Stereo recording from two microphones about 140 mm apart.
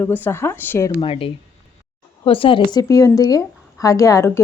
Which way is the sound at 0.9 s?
40° left (ahead or behind).